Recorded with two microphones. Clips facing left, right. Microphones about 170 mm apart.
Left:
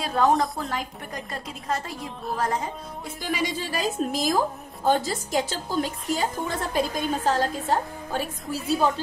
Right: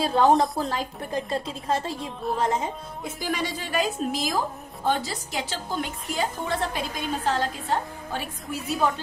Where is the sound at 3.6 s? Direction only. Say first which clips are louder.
Even; 35° left (ahead or behind).